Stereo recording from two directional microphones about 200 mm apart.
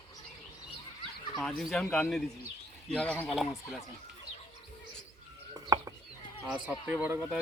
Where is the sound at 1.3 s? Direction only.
Centre (ahead or behind).